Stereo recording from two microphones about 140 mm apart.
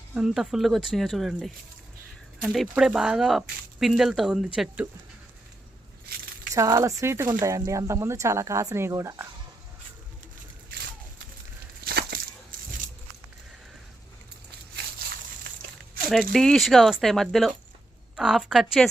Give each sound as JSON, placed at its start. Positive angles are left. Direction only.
{"t": 0.1, "sound": "speech", "side_deg": -5}
{"t": 6.5, "sound": "speech", "side_deg": -25}
{"t": 11.9, "sound": "a sound", "side_deg": -90}
{"t": 16.3, "sound": "speech", "side_deg": 5}